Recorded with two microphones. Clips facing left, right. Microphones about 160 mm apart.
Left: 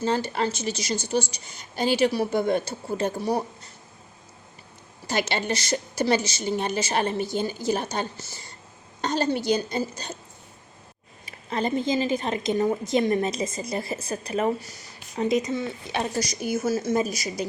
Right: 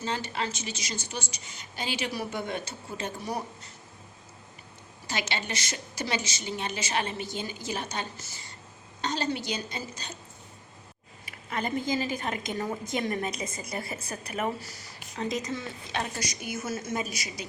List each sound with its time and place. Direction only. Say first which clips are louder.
0.0 s a woman's voice: left 7 dB; 40° left (ahead or behind)
5.0 s a woman's voice: left 7 dB; 40° left (ahead or behind)
9.0 s a woman's voice: left 6 dB; 50° left (ahead or behind)
11.3 s a woman's voice: left 5 dB; 30° left (ahead or behind)
16.1 s a woman's voice: left 8 dB; 35° left (ahead or behind)